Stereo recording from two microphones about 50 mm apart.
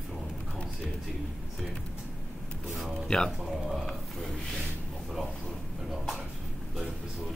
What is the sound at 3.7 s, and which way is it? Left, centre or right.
Speech, centre.